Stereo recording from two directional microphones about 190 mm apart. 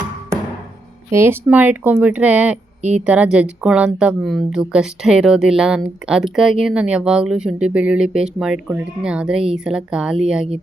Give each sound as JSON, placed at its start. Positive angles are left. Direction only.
{"t": 1.1, "sound": "speech", "side_deg": -15}